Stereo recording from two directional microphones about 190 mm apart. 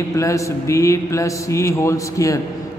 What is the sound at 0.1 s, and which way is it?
A man's voice, 15° left (ahead or behind).